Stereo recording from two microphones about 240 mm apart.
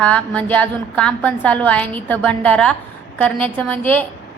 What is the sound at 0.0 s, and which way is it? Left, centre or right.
A woman's voice, centre.